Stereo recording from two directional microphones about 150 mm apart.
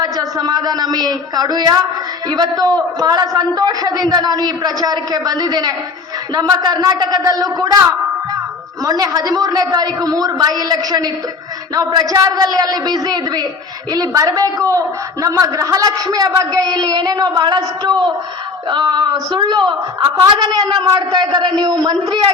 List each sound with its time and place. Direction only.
0.0 s a woman's voice: 25° right (ahead or behind)